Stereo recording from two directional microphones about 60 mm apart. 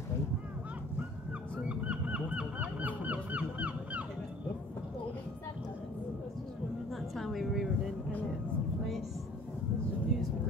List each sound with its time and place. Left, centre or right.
1.7 s honk: right
6.9 s a sound: centre
10.1 s vehicle: centre